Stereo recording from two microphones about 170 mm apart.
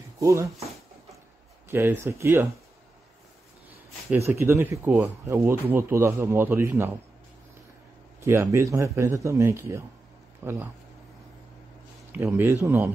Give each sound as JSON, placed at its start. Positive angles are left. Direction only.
{"t": 0.2, "sound": "speech", "side_deg": -15}
{"t": 1.7, "sound": "speech", "side_deg": -15}
{"t": 4.3, "sound": "speech", "side_deg": -15}
{"t": 8.2, "sound": "speech", "side_deg": -15}
{"t": 12.1, "sound": "speech", "side_deg": -10}